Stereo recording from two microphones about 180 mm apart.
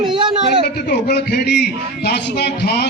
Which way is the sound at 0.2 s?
25° right (ahead or behind).